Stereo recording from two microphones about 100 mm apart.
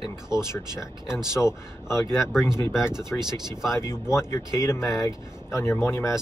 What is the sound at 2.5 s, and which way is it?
Speech, 25° left (ahead or behind).